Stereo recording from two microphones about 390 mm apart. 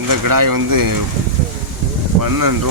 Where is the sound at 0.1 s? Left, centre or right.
Right.